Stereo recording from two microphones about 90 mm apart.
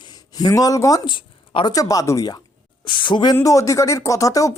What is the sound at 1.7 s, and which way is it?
Speech, 40° left (ahead or behind).